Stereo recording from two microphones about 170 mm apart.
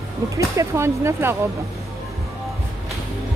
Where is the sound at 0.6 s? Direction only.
15° right (ahead or behind).